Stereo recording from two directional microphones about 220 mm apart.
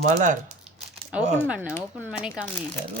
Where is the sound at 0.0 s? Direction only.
35° right (ahead or behind).